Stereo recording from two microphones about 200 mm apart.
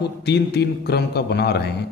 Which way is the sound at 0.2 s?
55° left (ahead or behind).